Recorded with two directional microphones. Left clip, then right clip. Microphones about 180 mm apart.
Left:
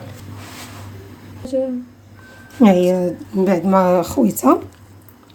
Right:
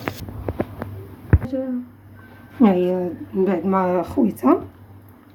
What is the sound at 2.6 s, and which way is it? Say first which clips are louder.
Speech: left 4 dB; 55° left (ahead or behind).